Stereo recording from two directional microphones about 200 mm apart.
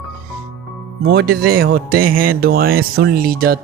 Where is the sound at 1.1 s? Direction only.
50° right (ahead or behind).